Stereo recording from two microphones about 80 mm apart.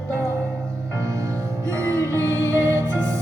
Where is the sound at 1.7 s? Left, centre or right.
Right.